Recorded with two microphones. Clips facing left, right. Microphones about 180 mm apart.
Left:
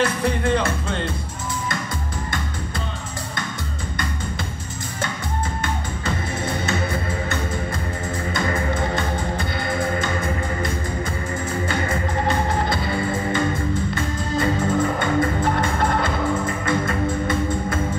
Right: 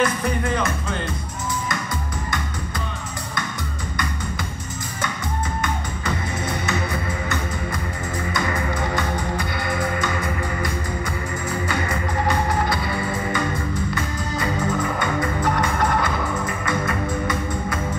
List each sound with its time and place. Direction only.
0.0 s speech: 30° left (ahead or behind)
5.6 s music: 30° left (ahead or behind)